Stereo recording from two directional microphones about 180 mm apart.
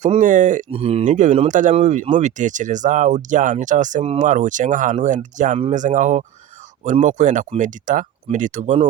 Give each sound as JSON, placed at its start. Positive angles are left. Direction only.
{"t": 0.0, "sound": "speech", "side_deg": -45}
{"t": 0.7, "sound": "speech", "side_deg": -30}